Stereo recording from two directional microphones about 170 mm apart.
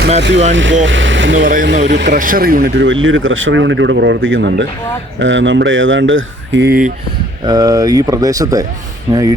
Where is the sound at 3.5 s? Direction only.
90° right; by 6.9 s 65° right (ahead or behind).